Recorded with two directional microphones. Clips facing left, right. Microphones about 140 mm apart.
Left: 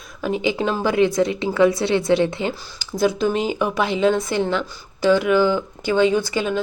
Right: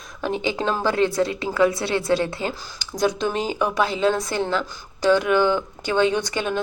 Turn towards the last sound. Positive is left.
turn(degrees=5)  # may be behind; listen again after turning